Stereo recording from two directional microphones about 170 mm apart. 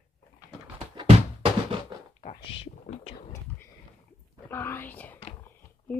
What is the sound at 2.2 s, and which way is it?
Speech, 35° left (ahead or behind).